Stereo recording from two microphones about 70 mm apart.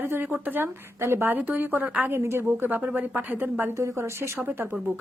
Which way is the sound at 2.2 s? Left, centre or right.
Right.